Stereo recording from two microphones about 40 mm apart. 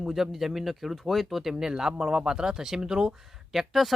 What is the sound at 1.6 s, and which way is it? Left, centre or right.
Speech, centre.